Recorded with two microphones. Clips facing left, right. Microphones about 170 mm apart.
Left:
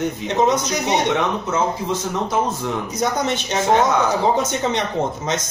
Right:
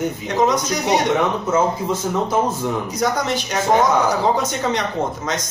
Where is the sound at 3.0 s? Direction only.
20° left (ahead or behind).